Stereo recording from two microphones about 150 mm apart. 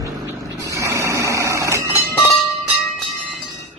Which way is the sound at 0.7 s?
20° right (ahead or behind).